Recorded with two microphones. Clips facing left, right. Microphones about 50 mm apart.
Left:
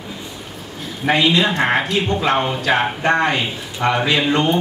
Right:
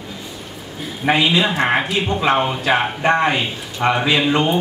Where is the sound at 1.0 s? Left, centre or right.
Centre.